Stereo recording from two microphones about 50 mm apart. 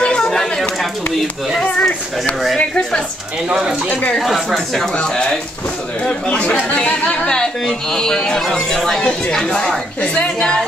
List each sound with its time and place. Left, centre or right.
0.0 s a sound: centre
1.6 s speech: left
4.2 s a woman's voice: centre
5.0 s a woman's voice: centre